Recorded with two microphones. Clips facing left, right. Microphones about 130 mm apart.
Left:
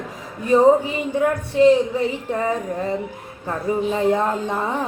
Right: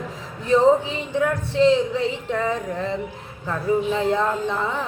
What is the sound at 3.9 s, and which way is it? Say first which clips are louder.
Speech: left 2 dB; 15° left (ahead or behind).